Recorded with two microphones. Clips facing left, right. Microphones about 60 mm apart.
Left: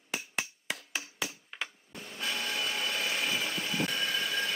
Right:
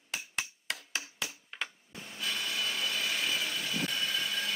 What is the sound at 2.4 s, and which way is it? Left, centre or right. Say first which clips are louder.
Printer: left 1 dB; left.